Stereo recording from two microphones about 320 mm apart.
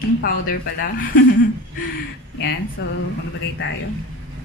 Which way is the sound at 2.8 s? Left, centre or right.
Left.